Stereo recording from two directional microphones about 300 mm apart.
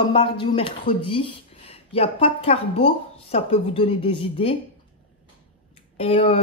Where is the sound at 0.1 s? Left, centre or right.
Centre.